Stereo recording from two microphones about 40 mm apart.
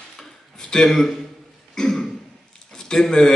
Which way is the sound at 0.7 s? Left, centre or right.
Centre.